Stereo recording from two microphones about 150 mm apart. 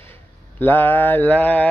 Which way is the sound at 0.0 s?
15° left (ahead or behind).